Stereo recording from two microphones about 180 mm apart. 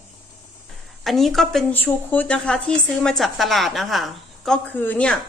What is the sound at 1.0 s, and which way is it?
A woman's voice, centre (ahead or behind).